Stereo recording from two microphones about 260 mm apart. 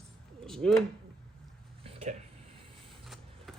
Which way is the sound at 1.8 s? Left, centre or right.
Right.